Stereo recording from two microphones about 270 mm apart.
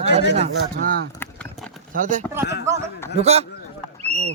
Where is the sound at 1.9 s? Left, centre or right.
Right.